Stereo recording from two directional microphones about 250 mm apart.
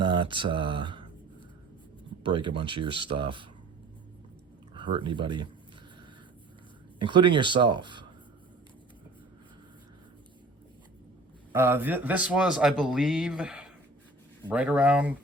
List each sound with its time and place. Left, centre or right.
0.0 s speech: centre
2.2 s speech: centre
4.7 s speech: centre
7.0 s speech: centre
11.5 s speech: centre